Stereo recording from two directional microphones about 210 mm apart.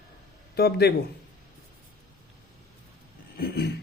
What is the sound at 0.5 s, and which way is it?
Speech, 50° left (ahead or behind).